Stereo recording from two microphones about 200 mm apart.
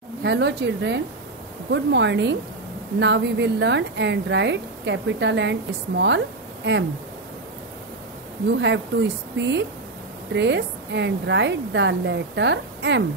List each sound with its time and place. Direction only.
0.2 s a woman's voice: 60° right (ahead or behind)
8.5 s a woman's voice: 65° right (ahead or behind)
10.3 s a woman's voice: 60° right (ahead or behind)